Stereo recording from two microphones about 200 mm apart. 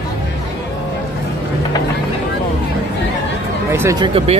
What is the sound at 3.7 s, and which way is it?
Speech, 15° right (ahead or behind).